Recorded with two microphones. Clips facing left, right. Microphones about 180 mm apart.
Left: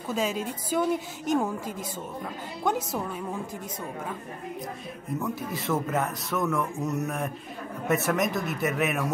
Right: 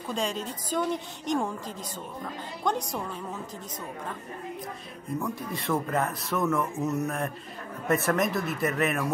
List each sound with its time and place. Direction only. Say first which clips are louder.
0.1 s a woman's voice: left 3 dB; 5° left (ahead or behind)
2.6 s a woman's voice: left 2 dB; 5° left (ahead or behind)
5.2 s speech: left 1 dB; centre (ahead or behind)